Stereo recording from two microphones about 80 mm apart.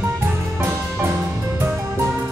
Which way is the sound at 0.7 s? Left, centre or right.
Right.